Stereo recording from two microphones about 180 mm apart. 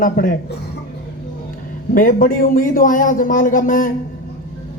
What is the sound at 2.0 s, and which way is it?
A man's voice, 50° left (ahead or behind).